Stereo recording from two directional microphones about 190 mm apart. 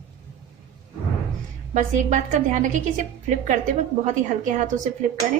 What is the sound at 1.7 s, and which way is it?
A woman's voice, 40° right (ahead or behind).